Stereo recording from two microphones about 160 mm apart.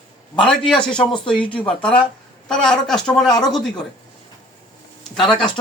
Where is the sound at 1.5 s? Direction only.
5° left (ahead or behind).